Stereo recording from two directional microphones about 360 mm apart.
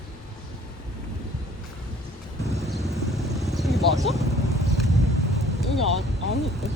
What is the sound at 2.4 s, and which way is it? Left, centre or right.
Vehicle, centre.